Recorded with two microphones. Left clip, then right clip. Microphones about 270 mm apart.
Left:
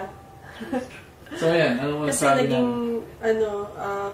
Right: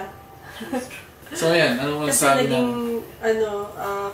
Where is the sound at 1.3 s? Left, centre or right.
Centre.